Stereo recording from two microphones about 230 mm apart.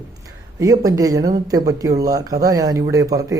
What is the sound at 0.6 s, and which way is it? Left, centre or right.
A man's voice, centre.